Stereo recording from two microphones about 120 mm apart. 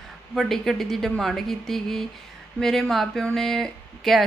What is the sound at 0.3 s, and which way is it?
Speech, centre (ahead or behind).